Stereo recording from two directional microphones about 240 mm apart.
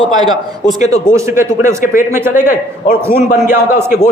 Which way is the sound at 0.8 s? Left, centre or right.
Left.